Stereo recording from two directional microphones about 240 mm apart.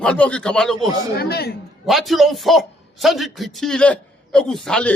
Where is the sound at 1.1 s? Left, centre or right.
Left.